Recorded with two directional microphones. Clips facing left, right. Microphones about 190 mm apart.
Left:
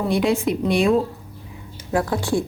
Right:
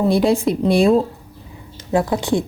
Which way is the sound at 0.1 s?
35° right (ahead or behind).